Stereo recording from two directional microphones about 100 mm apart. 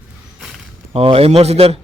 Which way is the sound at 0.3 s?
Centre (ahead or behind).